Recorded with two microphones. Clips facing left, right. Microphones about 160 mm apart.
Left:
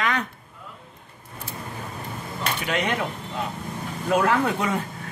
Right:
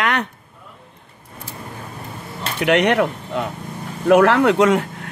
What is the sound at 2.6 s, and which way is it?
Speech, 75° right (ahead or behind).